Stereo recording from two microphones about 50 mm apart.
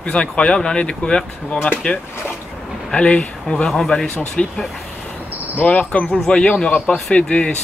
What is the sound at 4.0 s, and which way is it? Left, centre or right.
Speech, centre.